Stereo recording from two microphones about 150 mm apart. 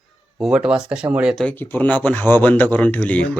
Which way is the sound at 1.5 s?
10° left (ahead or behind).